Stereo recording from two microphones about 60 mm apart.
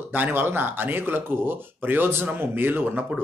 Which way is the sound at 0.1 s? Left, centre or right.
Right.